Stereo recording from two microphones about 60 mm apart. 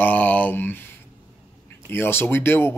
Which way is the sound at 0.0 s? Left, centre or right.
Left.